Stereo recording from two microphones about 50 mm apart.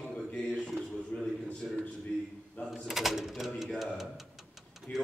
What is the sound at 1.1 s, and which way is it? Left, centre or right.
Speech, left.